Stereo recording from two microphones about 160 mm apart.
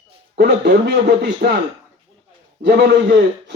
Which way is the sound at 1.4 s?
65° right (ahead or behind).